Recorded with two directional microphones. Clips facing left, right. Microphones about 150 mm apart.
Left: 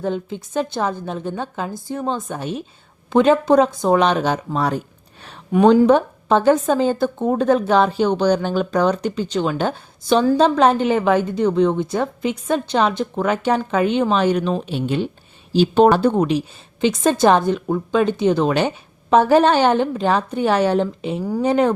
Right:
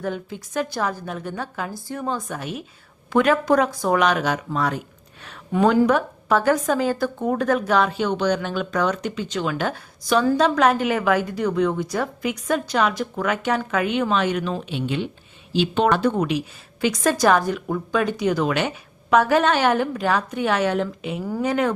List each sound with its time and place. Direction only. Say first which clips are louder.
0.0 s a woman's voice: left 4 dB; 25° left (ahead or behind)
5.5 s a woman's voice: left 5 dB; 20° left (ahead or behind)